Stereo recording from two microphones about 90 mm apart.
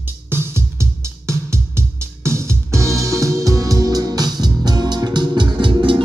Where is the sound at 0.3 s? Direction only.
30° right (ahead or behind).